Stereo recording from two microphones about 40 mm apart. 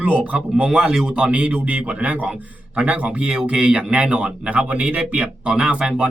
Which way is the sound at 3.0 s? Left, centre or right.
Right.